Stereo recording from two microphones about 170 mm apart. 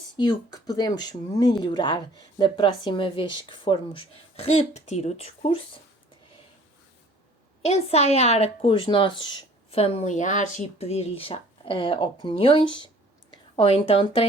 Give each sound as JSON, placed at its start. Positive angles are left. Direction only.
{"t": 0.2, "sound": "speech", "side_deg": 25}
{"t": 7.6, "sound": "a woman's voice", "side_deg": 40}